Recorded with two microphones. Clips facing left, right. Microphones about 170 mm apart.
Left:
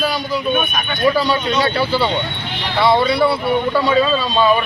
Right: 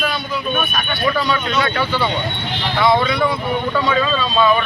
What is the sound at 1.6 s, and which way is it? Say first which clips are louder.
Speech: left 2 dB; 35° left (ahead or behind).